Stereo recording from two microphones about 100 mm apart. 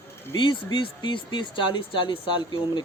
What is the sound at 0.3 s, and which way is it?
Speech, 55° left (ahead or behind).